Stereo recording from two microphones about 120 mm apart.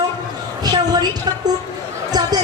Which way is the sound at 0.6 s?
35° right (ahead or behind).